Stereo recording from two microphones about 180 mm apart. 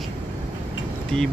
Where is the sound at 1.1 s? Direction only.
5° left (ahead or behind).